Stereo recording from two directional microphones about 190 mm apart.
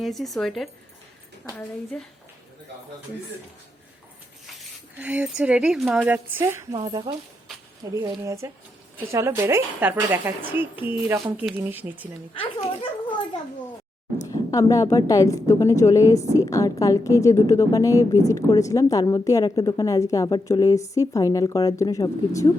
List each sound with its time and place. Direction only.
0.0 s a woman's voice: centre (ahead or behind)
4.9 s speech: 10° right (ahead or behind)
6.1 s a woman's voice: 10° right (ahead or behind)
6.7 s a woman's voice: 25° right (ahead or behind)
14.3 s a woman's voice: 15° left (ahead or behind)